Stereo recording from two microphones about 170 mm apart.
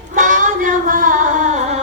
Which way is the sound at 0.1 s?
50° right (ahead or behind).